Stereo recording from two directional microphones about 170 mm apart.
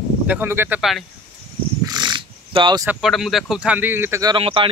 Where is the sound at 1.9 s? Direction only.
25° right (ahead or behind).